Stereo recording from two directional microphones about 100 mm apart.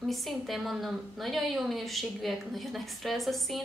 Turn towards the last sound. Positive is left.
turn(degrees=0)  # may be behind; listen again after turning